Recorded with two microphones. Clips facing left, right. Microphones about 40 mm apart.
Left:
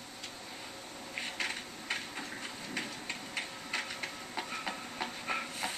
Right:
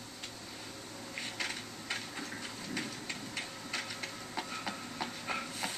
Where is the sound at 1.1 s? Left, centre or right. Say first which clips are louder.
Left 2 dB; centre.